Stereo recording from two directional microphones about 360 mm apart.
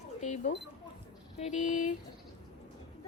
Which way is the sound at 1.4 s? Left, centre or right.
Centre.